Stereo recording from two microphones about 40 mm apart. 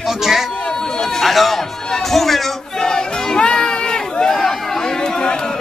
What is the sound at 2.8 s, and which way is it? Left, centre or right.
Crowd, centre.